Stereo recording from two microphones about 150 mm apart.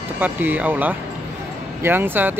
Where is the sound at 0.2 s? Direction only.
10° right (ahead or behind).